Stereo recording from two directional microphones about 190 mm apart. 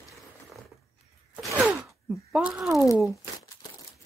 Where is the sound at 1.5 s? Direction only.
5° right (ahead or behind).